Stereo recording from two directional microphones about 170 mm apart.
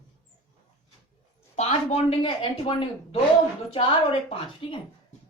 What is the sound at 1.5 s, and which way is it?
A woman's voice, 40° left (ahead or behind).